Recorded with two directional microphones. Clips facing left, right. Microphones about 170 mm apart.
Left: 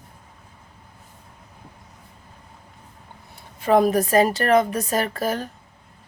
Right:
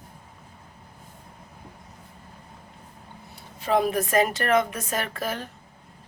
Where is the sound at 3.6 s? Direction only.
50° left (ahead or behind).